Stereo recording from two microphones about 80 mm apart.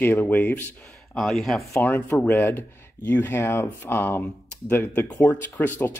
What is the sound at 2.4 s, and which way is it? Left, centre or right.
Speech, left.